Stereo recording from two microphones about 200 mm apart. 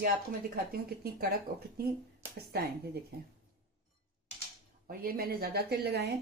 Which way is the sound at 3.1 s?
50° right (ahead or behind).